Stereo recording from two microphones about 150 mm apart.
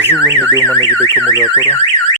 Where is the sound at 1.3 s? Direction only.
25° left (ahead or behind).